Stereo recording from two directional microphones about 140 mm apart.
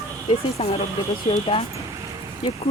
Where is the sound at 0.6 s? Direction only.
45° left (ahead or behind).